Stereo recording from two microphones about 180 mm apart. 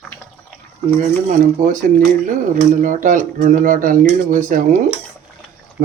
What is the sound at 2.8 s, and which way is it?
Speech, 45° right (ahead or behind).